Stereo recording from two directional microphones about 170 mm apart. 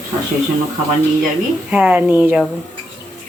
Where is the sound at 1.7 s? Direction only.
5° right (ahead or behind).